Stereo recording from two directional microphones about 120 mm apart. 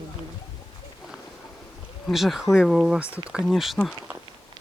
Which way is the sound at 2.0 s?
Centre (ahead or behind).